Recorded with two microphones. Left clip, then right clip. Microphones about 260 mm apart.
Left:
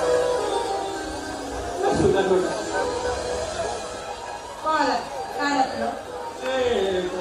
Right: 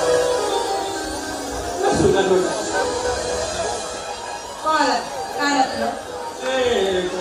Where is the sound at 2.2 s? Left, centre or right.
Left.